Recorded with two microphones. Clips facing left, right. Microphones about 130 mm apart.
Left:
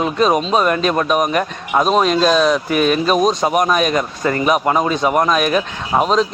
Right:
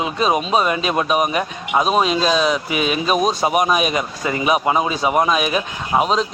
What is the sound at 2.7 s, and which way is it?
Speech, 50° left (ahead or behind).